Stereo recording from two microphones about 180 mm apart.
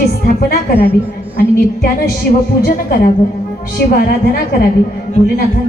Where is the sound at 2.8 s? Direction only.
55° left (ahead or behind).